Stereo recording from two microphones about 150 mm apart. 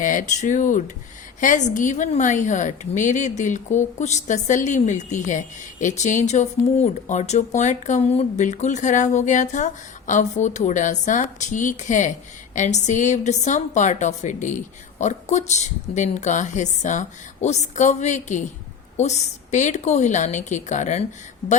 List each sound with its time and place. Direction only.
0.0 s a woman's voice: 60° left (ahead or behind)